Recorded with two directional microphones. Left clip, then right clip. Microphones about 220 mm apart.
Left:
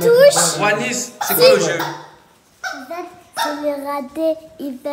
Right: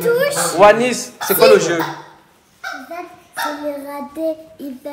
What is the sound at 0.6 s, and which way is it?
A man's voice, centre (ahead or behind).